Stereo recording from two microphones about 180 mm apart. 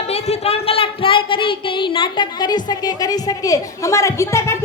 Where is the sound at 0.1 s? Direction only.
35° left (ahead or behind).